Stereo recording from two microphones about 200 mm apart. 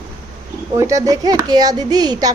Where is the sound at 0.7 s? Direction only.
15° right (ahead or behind).